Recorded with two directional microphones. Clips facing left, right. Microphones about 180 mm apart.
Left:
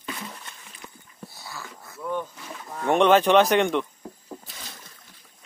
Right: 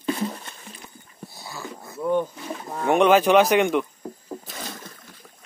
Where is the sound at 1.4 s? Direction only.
20° right (ahead or behind).